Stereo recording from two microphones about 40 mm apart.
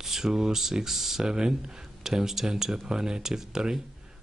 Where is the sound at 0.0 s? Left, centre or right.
Centre.